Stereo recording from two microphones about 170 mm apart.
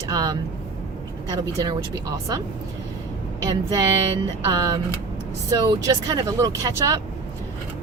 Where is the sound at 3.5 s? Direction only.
25° right (ahead or behind).